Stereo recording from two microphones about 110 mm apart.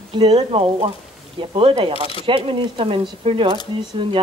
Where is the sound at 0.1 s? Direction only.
55° right (ahead or behind).